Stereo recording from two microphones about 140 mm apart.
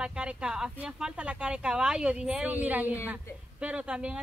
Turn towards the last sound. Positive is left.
turn(degrees=-5)  # may be behind; listen again after turning